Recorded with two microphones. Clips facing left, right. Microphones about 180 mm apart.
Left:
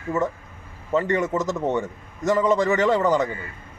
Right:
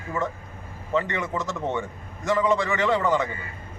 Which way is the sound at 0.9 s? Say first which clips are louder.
Left 4 dB; 40° left (ahead or behind).